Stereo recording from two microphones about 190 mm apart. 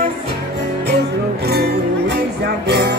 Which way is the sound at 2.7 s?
60° right (ahead or behind).